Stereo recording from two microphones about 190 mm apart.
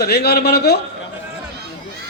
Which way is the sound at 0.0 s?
55° left (ahead or behind).